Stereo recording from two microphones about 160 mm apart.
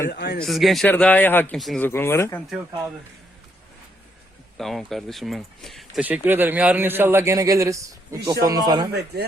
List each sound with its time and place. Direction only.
0.1 s a man's voice: 90° left
0.3 s speech: centre (ahead or behind)
1.5 s speech: centre (ahead or behind)
1.8 s speech: 15° left (ahead or behind)
4.5 s speech: centre (ahead or behind)
6.1 s a man's voice: 10° right (ahead or behind)
8.9 s a man's voice: 90° right